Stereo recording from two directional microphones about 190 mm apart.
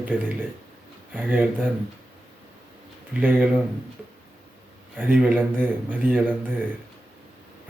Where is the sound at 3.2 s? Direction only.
10° right (ahead or behind).